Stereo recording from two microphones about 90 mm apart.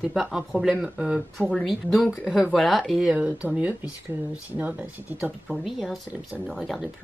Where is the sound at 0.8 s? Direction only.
15° right (ahead or behind).